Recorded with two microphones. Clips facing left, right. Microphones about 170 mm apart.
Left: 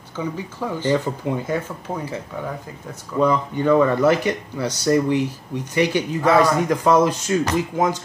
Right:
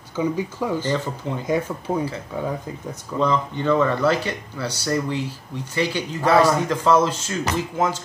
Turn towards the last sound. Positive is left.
turn(degrees=15)  # may be behind; listen again after turning